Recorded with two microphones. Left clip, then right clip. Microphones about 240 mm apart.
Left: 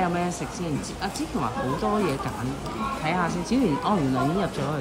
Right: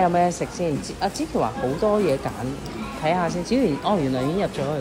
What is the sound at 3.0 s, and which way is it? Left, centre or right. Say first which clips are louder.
Speech: right 5 dB; left.